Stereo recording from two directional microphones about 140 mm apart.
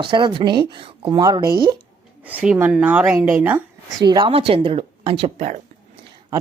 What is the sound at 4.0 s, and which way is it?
Speech, 30° right (ahead or behind).